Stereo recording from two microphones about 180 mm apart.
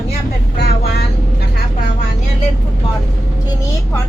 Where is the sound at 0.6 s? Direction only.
60° left (ahead or behind).